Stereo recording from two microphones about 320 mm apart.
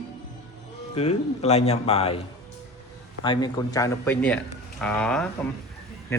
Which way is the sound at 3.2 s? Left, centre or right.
Centre.